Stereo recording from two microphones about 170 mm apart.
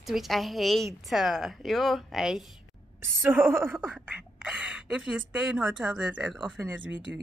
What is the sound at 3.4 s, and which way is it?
A woman's voice, 15° right (ahead or behind).